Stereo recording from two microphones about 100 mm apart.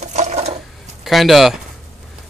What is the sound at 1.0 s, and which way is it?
Speech, centre (ahead or behind).